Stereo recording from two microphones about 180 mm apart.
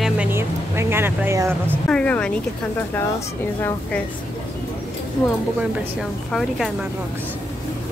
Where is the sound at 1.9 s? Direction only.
5° left (ahead or behind).